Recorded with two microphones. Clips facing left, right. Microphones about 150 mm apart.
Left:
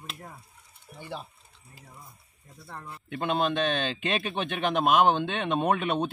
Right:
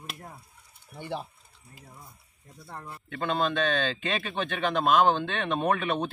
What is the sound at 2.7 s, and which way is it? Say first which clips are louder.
Speech: even; 5° right (ahead or behind).